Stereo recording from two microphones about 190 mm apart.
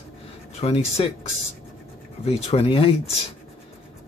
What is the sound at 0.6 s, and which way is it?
Speech, 30° left (ahead or behind).